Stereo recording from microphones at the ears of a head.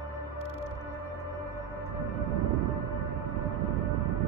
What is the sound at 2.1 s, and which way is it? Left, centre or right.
Music, right.